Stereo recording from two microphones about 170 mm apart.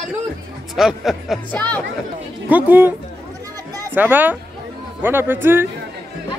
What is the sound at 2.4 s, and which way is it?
Speech, 10° right (ahead or behind).